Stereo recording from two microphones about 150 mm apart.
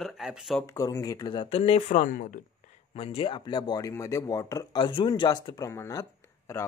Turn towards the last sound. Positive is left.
turn(degrees=20)  # may be behind; listen again after turning